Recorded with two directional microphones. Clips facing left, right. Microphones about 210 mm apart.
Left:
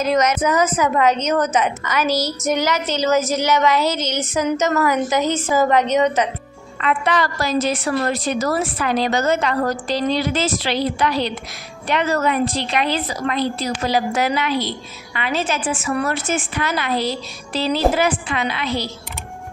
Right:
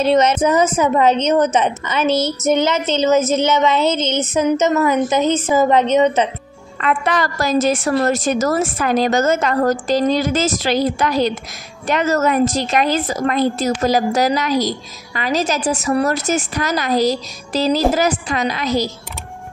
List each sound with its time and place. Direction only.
0.0 s a woman's voice: 30° right (ahead or behind)
6.8 s a woman's voice: 45° right (ahead or behind)